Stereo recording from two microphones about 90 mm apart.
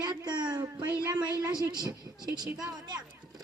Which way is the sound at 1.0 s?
40° right (ahead or behind).